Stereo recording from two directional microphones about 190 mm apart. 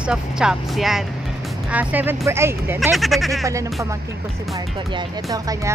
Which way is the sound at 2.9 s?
Centre (ahead or behind).